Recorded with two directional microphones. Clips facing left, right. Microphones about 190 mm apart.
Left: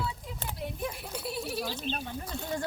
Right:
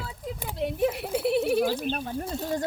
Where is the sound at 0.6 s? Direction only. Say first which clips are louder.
Right 11 dB; 75° right (ahead or behind); by 1.7 s 55° right (ahead or behind).